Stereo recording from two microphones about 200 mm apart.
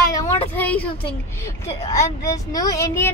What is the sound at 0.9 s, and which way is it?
Speech, 25° left (ahead or behind).